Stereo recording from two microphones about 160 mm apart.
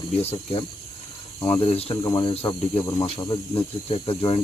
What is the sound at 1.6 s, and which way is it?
Speech, 40° left (ahead or behind).